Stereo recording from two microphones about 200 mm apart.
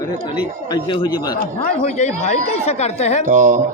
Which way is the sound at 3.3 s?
45° right (ahead or behind).